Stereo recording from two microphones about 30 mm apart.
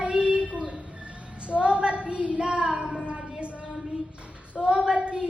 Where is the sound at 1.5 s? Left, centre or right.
Right.